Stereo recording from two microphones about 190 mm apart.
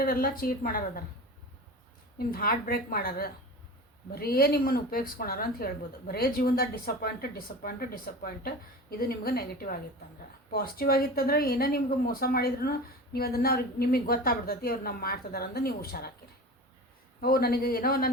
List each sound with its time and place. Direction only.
0.0 s speech: 50° left (ahead or behind)
2.1 s speech: 50° left (ahead or behind)
17.2 s speech: 50° left (ahead or behind)